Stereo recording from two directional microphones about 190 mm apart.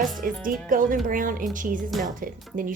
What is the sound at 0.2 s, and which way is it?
Speech, 45° right (ahead or behind).